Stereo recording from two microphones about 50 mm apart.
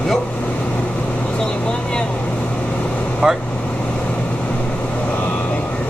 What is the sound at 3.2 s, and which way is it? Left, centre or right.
Vehicle, centre.